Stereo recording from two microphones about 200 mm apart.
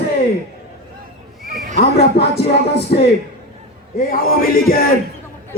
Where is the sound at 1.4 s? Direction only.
45° right (ahead or behind).